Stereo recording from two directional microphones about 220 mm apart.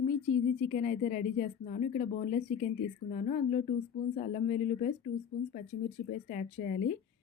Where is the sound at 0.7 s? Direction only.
35° left (ahead or behind).